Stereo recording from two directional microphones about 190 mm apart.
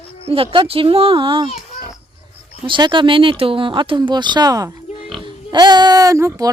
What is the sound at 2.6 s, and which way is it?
Speech, 25° right (ahead or behind).